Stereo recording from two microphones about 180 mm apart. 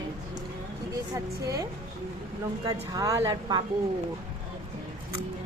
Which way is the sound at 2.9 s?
20° right (ahead or behind).